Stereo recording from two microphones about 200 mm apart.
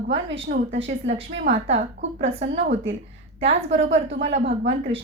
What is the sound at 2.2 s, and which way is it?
Speech, 30° right (ahead or behind).